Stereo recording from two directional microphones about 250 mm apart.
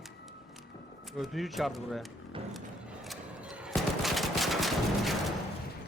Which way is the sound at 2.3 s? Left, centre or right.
Right.